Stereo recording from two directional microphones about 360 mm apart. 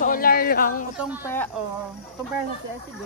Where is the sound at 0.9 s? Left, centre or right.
Centre.